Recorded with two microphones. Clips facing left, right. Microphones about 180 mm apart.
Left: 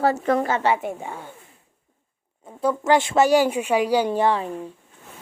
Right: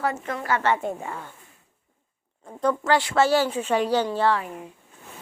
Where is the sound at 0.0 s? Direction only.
35° left (ahead or behind).